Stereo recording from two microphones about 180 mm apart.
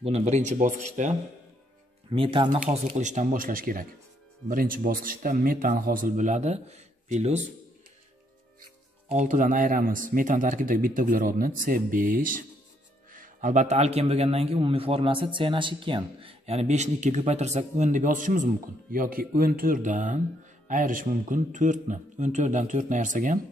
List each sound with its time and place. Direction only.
0.0 s a man's voice: 40° right (ahead or behind)
2.0 s speech: 30° right (ahead or behind)
2.6 s a man's voice: 45° right (ahead or behind)
9.1 s a man's voice: 45° right (ahead or behind)